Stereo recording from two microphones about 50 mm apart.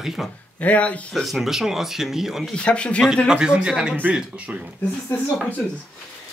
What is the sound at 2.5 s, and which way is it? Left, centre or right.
Speech, left.